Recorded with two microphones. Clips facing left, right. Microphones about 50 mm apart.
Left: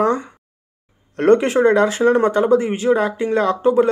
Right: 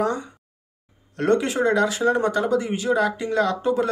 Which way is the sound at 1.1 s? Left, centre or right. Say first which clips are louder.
Left 7 dB; left.